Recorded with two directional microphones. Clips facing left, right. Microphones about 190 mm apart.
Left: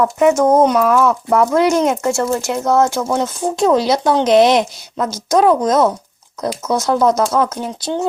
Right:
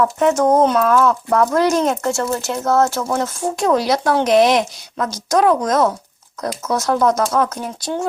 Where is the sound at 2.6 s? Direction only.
Centre (ahead or behind).